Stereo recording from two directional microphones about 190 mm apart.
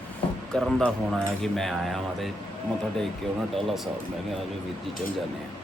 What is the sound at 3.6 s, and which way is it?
Speech, centre (ahead or behind).